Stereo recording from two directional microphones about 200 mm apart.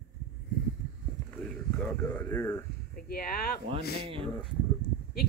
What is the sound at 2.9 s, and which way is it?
A woman's voice, 45° left (ahead or behind).